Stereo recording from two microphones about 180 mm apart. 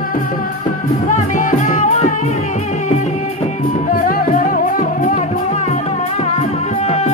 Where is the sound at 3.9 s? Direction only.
50° left (ahead or behind).